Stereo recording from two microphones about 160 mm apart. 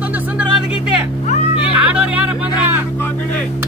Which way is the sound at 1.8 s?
10° right (ahead or behind).